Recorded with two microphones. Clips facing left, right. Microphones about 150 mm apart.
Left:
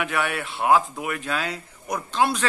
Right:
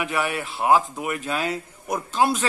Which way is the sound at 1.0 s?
20° right (ahead or behind).